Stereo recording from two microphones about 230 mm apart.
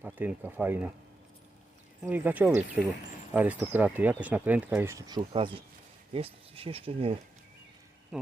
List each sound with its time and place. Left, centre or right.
0.0 s speech: centre
2.0 s speech: centre; by 7.2 s right
8.1 s speech: centre